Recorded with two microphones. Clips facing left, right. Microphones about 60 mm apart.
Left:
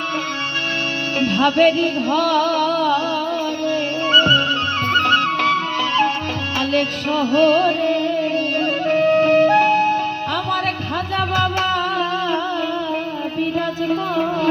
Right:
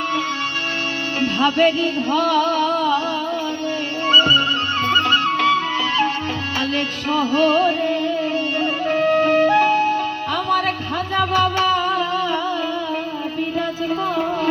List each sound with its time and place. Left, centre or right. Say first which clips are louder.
1.2 s music: left 2 dB; left
4.1 s music: even; left
6.6 s music: left 5 dB; left
9.5 s music: left 1 dB; left